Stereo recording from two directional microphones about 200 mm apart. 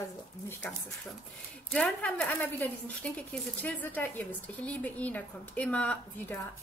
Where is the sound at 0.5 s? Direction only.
5° left (ahead or behind).